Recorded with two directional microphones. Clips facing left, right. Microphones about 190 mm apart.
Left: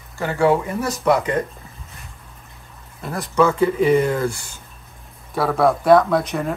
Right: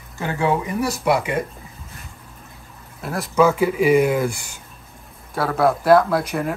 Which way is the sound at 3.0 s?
5° right (ahead or behind).